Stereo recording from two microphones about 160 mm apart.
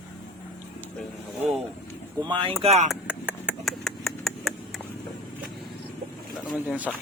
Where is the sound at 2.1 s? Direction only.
30° right (ahead or behind).